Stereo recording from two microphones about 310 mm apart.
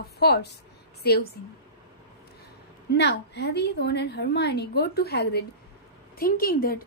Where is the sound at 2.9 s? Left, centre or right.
Left.